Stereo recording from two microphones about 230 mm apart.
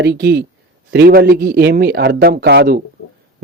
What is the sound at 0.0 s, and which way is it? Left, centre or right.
Speech, right.